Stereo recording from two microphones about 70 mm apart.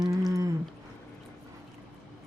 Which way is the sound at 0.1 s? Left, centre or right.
Right.